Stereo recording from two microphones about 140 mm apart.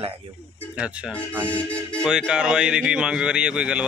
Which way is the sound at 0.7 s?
10° right (ahead or behind).